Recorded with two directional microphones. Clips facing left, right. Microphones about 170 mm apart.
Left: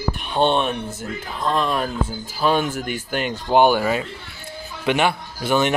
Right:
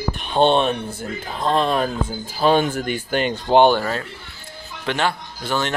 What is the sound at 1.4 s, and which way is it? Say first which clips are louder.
Speech: right 2 dB; 30° right (ahead or behind).